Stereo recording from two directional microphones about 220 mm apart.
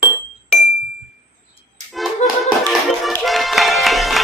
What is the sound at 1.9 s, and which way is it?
Music, centre (ahead or behind).